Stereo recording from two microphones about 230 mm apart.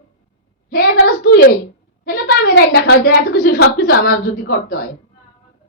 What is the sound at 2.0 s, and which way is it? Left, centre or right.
A woman's voice, left.